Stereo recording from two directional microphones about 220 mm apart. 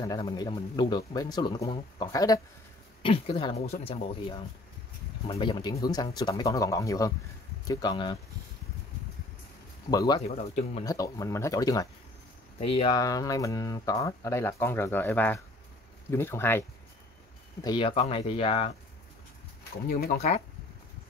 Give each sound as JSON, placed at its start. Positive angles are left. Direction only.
{"t": 0.0, "sound": "a man's voice", "side_deg": 20}
{"t": 9.8, "sound": "speech", "side_deg": 15}
{"t": 10.2, "sound": "a man's voice", "side_deg": 30}
{"t": 10.9, "sound": "speech", "side_deg": 15}
{"t": 12.5, "sound": "speech", "side_deg": 25}
{"t": 17.6, "sound": "a man's voice", "side_deg": 25}
{"t": 19.9, "sound": "speech", "side_deg": 45}
{"t": 20.2, "sound": "a man's voice", "side_deg": 30}